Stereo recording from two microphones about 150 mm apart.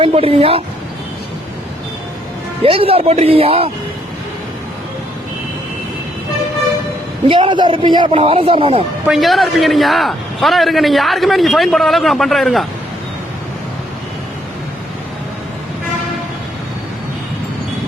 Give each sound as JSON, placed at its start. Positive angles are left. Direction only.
{"t": 0.0, "sound": "a man's voice", "side_deg": -40}
{"t": 2.6, "sound": "a man's voice", "side_deg": -40}
{"t": 7.3, "sound": "a man's voice", "side_deg": -35}
{"t": 9.0, "sound": "a man's voice", "side_deg": 0}